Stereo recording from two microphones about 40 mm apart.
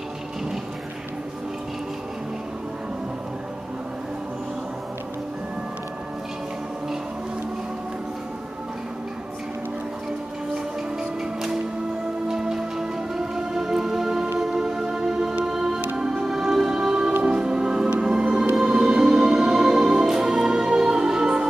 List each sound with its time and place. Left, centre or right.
12.3 s music: centre
18.6 s music: centre